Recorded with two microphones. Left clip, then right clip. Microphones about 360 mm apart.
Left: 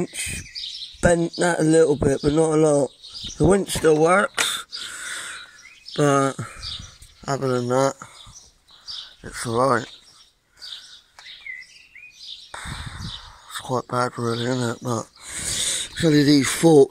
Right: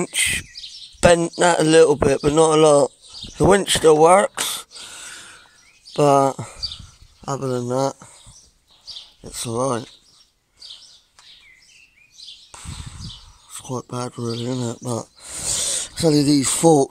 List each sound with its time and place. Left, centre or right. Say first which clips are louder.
0.2 s chirp: right 10 dB; right
1.0 s speech: right 5 dB; right
4.7 s a sound: left 5 dB; centre
5.9 s speech: right 4 dB; right
7.2 s speech: left 1 dB; centre
9.4 s speech: left 3 dB; centre
12.4 s a sound: left 5 dB; centre